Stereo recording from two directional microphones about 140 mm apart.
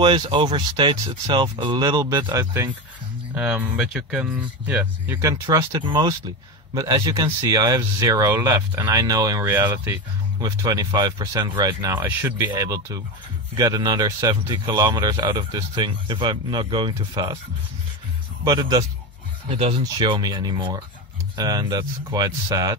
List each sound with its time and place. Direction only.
0.0 s speech: 35° right (ahead or behind); by 3.6 s 15° right (ahead or behind)
3.7 s speech: 5° right (ahead or behind)
5.3 s speech: 25° right (ahead or behind)
10.4 s speech: 25° right (ahead or behind)
18.4 s speech: 30° right (ahead or behind)